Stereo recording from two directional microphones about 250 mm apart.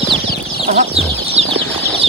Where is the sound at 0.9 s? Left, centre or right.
Right.